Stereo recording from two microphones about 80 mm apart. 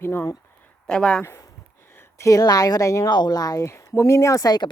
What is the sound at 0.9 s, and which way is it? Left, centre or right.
Speech, centre.